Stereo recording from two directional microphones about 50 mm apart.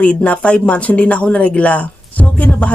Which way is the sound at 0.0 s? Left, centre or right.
Left.